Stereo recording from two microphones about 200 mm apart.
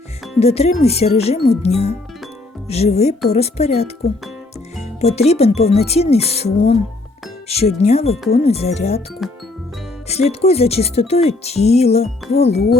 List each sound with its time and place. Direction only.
0.3 s speech: 30° left (ahead or behind)
9.2 s music: centre (ahead or behind)
10.1 s speech: 30° left (ahead or behind)